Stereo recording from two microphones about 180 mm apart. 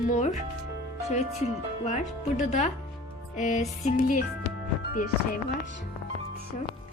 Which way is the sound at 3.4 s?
40° left (ahead or behind).